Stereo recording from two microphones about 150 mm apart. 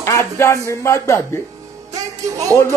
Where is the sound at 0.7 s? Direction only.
20° left (ahead or behind).